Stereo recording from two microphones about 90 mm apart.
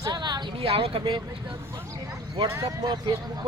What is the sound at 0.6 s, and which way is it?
Speech, 90° right.